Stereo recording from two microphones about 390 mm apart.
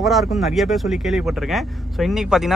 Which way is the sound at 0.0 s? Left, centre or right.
Centre.